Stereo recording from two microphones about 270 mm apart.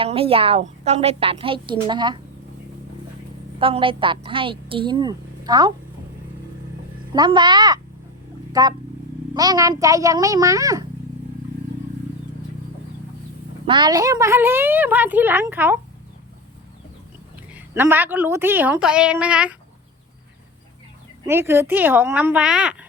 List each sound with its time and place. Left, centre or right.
0.0 s a woman's voice: right
3.6 s a woman's voice: centre
7.1 s a woman's voice: centre
13.7 s a woman's voice: centre
17.5 s a woman's voice: centre
21.2 s a woman's voice: centre